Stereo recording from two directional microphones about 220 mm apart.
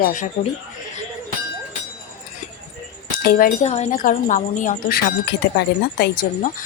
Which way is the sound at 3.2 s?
40° left (ahead or behind).